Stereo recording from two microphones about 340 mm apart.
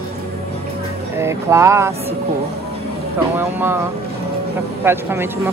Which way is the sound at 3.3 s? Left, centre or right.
Centre.